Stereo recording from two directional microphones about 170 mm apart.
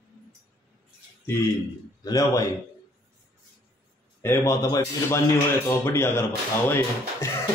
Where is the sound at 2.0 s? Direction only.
20° left (ahead or behind).